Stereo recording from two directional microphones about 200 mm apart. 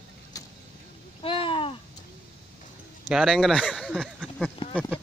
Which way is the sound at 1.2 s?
25° left (ahead or behind).